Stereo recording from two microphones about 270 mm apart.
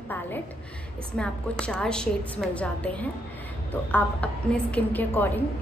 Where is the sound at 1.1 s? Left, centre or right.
Centre.